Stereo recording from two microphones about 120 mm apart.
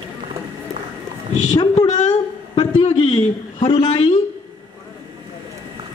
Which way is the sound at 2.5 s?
45° left (ahead or behind).